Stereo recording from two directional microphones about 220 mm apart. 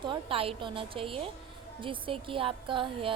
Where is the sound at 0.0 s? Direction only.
25° right (ahead or behind).